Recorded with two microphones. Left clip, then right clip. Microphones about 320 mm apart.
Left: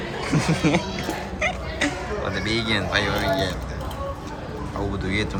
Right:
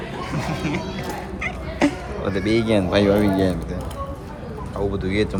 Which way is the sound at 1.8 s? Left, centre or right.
Centre.